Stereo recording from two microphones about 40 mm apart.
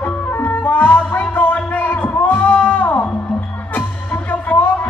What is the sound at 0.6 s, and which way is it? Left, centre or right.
Music, left.